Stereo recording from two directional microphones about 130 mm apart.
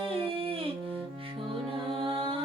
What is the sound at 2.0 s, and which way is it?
Music, 40° right (ahead or behind).